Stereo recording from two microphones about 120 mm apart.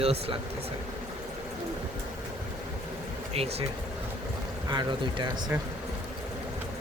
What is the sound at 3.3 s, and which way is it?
Speech, 55° right (ahead or behind).